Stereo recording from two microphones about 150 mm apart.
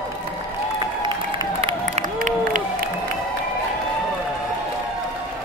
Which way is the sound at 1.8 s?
60° right (ahead or behind).